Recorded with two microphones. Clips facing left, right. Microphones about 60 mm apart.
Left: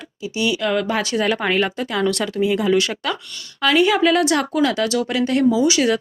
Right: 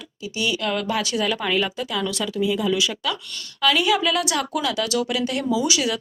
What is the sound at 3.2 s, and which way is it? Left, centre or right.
A woman's voice, left.